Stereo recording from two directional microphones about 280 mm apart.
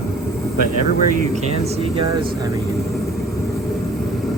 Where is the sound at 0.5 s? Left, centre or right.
Right.